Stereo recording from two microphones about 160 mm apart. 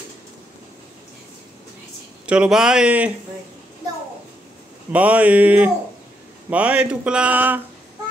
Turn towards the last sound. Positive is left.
turn(degrees=-10)  # may be behind; listen again after turning